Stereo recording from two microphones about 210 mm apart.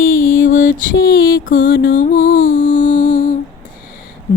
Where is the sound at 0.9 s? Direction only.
65° left (ahead or behind).